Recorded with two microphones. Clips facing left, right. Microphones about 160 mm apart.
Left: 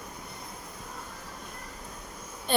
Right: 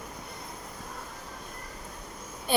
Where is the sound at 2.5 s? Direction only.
10° right (ahead or behind).